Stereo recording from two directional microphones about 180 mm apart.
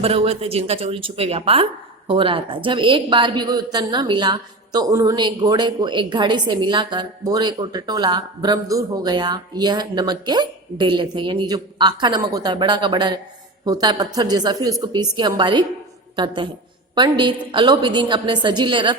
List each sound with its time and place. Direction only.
0.0 s a woman's voice: 35° right (ahead or behind)